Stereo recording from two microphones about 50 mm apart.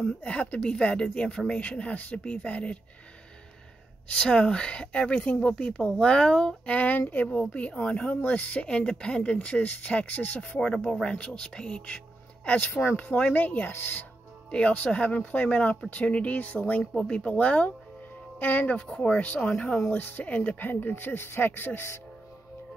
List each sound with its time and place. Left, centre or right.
0.0 s speech: left
4.1 s speech: centre; by 7.2 s left
7.2 s speech: centre
8.6 s speech: centre
10.6 s speech: centre; by 13.7 s left
13.7 s speech: left
14.5 s speech: left
16.8 s speech: centre
17.1 s speech: left
18.9 s speech: left
19.9 s speech: left
20.6 s speech: left